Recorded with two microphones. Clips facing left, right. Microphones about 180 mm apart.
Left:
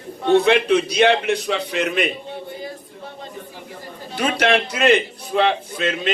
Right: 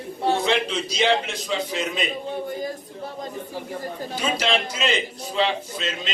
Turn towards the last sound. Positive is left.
turn(degrees=55)  # may be behind; listen again after turning